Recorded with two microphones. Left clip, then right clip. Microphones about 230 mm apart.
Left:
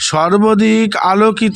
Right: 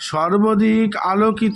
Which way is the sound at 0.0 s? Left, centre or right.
Left.